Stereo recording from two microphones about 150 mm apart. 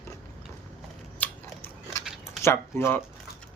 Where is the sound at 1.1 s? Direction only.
10° left (ahead or behind).